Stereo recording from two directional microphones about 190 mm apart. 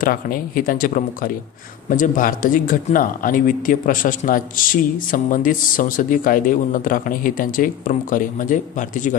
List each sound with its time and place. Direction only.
0.0 s speech: 50° left (ahead or behind)